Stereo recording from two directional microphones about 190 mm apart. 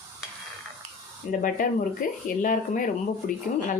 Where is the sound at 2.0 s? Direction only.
45° left (ahead or behind).